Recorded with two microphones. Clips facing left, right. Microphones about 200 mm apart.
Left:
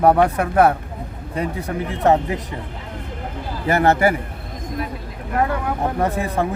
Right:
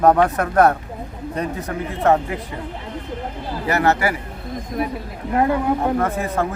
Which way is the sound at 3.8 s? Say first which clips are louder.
Left 3 dB; 25° left (ahead or behind).